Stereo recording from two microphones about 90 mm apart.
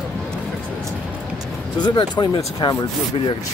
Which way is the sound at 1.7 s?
55° left (ahead or behind).